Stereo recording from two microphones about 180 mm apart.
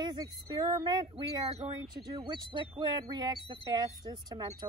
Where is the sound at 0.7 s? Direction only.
25° right (ahead or behind).